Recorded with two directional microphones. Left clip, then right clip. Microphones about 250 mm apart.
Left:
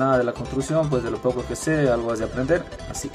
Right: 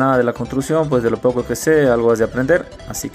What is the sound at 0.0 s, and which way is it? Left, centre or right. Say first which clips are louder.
Speech: right 5 dB; right.